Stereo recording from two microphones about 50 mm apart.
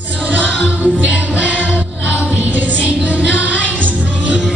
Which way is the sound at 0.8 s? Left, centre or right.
Right.